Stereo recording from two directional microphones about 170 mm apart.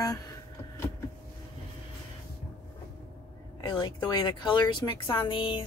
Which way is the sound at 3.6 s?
25° left (ahead or behind).